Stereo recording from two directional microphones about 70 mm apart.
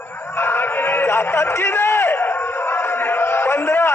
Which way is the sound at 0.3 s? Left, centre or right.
Left.